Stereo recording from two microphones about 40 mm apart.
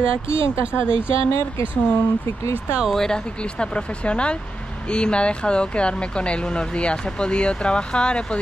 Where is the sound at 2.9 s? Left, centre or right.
Centre.